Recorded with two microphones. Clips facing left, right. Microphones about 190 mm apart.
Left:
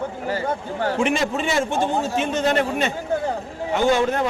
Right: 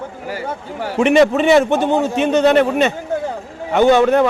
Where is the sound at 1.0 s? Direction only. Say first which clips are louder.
Right 13 dB; 65° right (ahead or behind).